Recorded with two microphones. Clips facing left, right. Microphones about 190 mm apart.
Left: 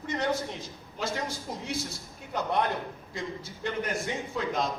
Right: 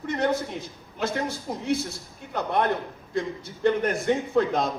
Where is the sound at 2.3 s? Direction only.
55° right (ahead or behind).